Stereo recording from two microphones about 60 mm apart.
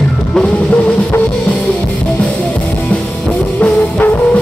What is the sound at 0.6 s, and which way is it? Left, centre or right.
Music, left.